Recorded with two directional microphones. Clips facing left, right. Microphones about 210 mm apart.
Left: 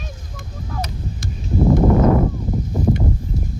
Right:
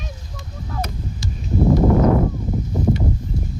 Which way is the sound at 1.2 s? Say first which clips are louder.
Right 3 dB; 55° left (ahead or behind).